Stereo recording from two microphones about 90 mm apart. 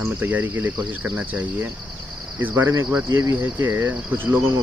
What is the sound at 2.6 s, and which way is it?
Cricket, 30° right (ahead or behind).